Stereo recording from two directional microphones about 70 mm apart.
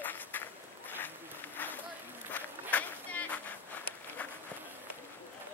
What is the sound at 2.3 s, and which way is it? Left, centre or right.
Run, left.